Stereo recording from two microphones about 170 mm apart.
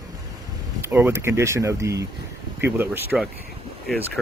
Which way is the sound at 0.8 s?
15° right (ahead or behind).